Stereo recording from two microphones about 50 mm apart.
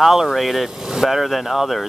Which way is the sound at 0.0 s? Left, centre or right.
Centre.